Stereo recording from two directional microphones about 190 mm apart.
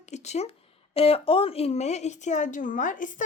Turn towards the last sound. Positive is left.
turn(degrees=45)  # may be behind; listen again after turning